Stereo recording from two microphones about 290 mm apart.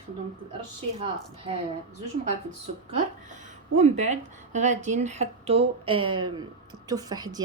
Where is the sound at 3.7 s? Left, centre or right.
Right.